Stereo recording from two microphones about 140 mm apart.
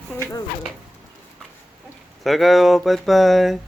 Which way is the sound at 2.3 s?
Centre (ahead or behind).